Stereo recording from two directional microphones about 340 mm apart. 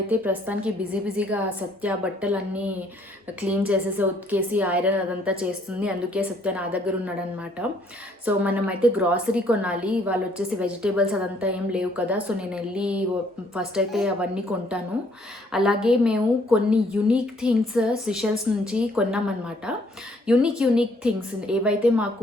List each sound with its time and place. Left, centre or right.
0.1 s a woman's voice: centre
8.2 s a woman's voice: centre
20.2 s a woman's voice: centre